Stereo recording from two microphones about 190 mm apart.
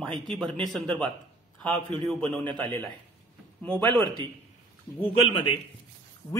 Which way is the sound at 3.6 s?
10° left (ahead or behind).